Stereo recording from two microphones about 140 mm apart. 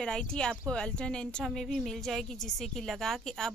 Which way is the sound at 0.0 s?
5° left (ahead or behind).